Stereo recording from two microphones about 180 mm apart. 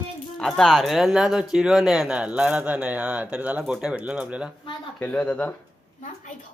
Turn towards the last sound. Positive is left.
turn(degrees=10)  # may be behind; listen again after turning